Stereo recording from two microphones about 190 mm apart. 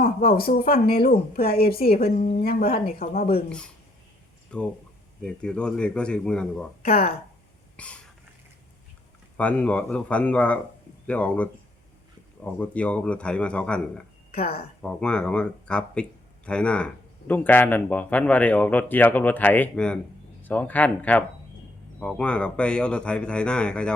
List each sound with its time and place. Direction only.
0.0 s speech: 50° left (ahead or behind)
1.9 s a woman's voice: 30° left (ahead or behind)
2.3 s speech: 55° left (ahead or behind)
4.5 s speech: 5° left (ahead or behind)
6.8 s a woman's voice: 30° left (ahead or behind)
7.8 s a sound: 5° left (ahead or behind)
9.4 s speech: 5° left (ahead or behind)
12.5 s speech: 5° left (ahead or behind)